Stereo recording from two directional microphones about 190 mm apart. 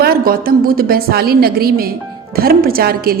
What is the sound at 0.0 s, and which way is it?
A woman's voice, 50° right (ahead or behind).